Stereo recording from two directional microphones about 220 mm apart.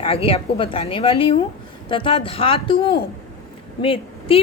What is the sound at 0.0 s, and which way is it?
A woman's voice, 25° left (ahead or behind).